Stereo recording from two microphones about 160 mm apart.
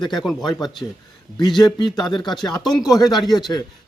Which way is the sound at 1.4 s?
25° left (ahead or behind).